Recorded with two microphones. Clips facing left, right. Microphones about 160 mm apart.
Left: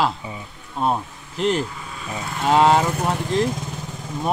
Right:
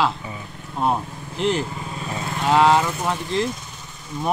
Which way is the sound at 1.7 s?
35° right (ahead or behind).